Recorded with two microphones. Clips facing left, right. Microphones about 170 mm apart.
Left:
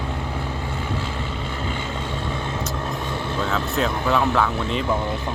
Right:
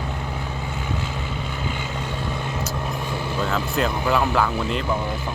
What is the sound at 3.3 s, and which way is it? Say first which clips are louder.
Speech: even; centre (ahead or behind).